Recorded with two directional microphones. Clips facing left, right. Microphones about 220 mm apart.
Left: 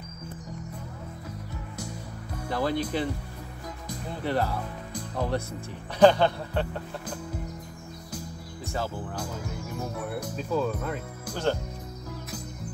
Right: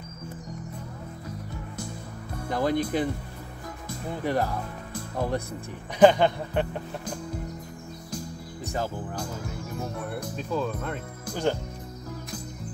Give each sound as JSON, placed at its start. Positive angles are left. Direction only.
{"t": 2.5, "sound": "speech", "side_deg": -15}
{"t": 4.2, "sound": "speech", "side_deg": -15}
{"t": 8.6, "sound": "speech", "side_deg": -15}
{"t": 9.9, "sound": "music", "side_deg": 5}